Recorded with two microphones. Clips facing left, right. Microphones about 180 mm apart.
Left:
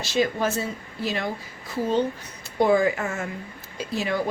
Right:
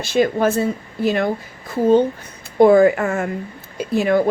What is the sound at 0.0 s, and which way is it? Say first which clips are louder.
A woman's voice: right 7 dB; 55° right (ahead or behind).